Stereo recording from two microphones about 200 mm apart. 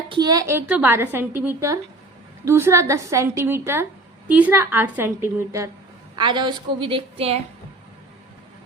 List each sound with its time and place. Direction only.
0.1 s a woman's voice: 20° right (ahead or behind)